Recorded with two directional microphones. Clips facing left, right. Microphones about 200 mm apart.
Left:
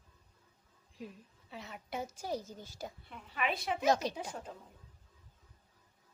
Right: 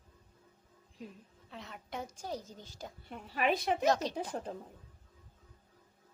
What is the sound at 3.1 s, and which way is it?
Speech, 40° right (ahead or behind).